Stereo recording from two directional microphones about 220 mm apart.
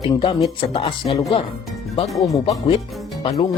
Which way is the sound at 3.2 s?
25° left (ahead or behind).